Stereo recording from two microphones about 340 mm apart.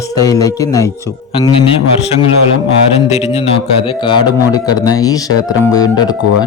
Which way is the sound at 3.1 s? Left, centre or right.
Centre.